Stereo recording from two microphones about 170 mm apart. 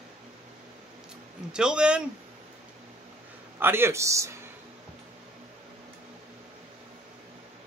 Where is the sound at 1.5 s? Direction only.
5° right (ahead or behind).